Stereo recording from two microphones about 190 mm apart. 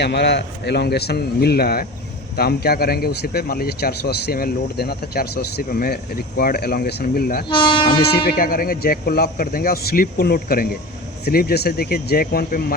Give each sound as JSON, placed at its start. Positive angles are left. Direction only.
{"t": 0.0, "sound": "speech", "side_deg": 60}
{"t": 7.4, "sound": "speech", "side_deg": 25}
{"t": 7.9, "sound": "speech", "side_deg": 55}